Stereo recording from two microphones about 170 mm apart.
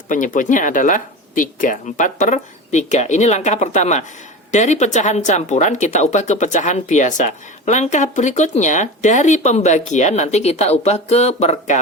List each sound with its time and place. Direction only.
0.1 s speech: 50° left (ahead or behind)